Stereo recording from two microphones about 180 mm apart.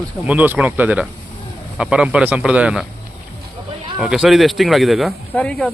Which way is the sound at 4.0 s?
5° right (ahead or behind).